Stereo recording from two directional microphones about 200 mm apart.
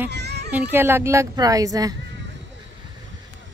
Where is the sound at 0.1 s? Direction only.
55° right (ahead or behind).